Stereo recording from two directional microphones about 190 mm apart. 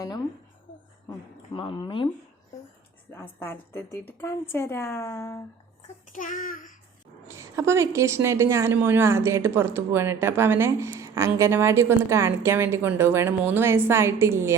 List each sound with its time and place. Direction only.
1.5 s speech: 25° left (ahead or behind)
3.1 s a woman's voice: 10° left (ahead or behind)
6.1 s a child's voice: 45° left (ahead or behind)
7.3 s a woman's voice: 15° right (ahead or behind)